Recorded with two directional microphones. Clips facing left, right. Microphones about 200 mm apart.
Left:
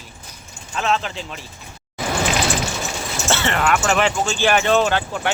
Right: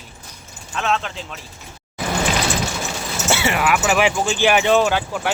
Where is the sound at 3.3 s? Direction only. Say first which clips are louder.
Right 1 dB; 10° right (ahead or behind).